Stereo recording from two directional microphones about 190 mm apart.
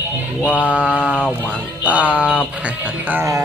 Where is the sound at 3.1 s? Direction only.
15° right (ahead or behind).